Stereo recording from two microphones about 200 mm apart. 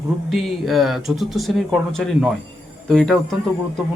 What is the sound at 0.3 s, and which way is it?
Speech, centre (ahead or behind).